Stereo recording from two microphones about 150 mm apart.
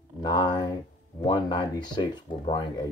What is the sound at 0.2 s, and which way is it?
Speech, 30° left (ahead or behind).